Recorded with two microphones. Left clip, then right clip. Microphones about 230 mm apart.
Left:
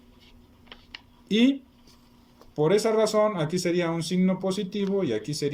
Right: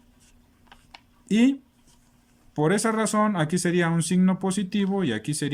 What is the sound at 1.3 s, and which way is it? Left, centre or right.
Speech, right.